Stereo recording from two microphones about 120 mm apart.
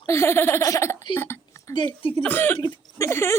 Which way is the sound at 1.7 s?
45° left (ahead or behind).